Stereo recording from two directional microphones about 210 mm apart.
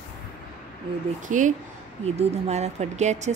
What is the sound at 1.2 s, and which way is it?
A woman's voice, 35° right (ahead or behind).